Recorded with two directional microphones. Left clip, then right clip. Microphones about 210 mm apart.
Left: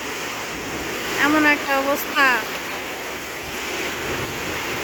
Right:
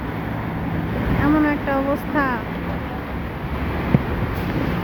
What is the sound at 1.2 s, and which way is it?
Speech, 15° left (ahead or behind).